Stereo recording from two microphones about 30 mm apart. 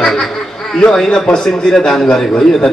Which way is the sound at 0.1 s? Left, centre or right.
Centre.